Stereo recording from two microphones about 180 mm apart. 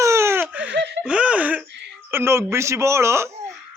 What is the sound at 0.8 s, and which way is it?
Speech, 75° right (ahead or behind).